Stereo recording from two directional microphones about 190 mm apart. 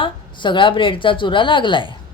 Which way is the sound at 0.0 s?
25° left (ahead or behind).